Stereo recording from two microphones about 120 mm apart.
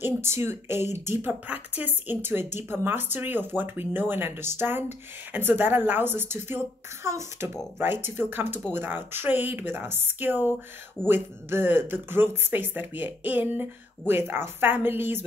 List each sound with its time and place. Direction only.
0.0 s speech: 20° right (ahead or behind)